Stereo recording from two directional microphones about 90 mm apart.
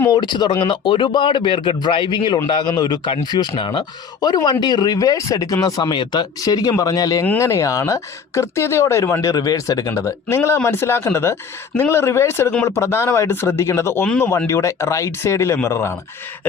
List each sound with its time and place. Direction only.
0.1 s a man's voice: 55° left (ahead or behind); by 9.3 s 30° left (ahead or behind)
9.3 s speech: 45° left (ahead or behind)